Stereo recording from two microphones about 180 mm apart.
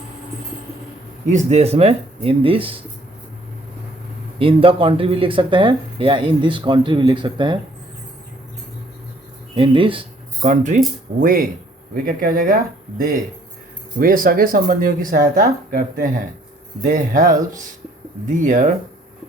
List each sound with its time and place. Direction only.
1.3 s speech: 40° right (ahead or behind)
4.4 s speech: 30° right (ahead or behind)
9.6 s speech: 30° right (ahead or behind)
10.5 s speech: 45° right (ahead or behind)
14.0 s speech: 50° right (ahead or behind)